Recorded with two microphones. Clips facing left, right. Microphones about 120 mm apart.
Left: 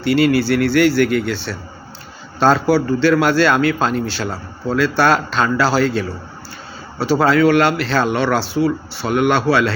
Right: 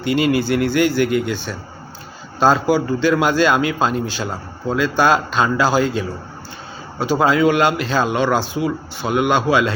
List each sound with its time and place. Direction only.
0.0 s a man's voice: 20° right (ahead or behind)